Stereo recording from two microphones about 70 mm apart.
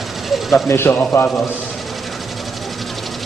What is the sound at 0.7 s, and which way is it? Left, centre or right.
Speech, left.